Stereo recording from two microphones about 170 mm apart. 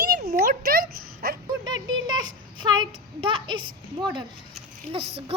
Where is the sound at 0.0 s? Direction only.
65° right (ahead or behind).